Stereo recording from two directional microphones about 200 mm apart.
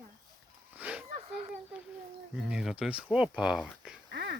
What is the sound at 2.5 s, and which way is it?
Speech, 5° right (ahead or behind).